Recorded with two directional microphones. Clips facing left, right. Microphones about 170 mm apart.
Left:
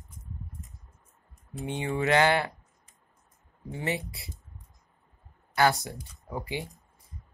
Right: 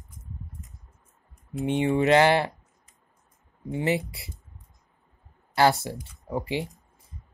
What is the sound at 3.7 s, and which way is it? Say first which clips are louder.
Speech: right 6 dB; 20° right (ahead or behind).